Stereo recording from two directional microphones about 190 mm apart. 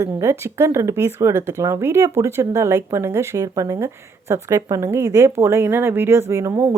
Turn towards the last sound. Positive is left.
turn(degrees=-15)  # may be behind; listen again after turning